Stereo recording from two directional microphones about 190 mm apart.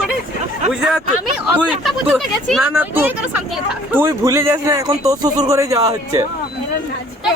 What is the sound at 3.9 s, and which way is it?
A man's voice, 15° right (ahead or behind).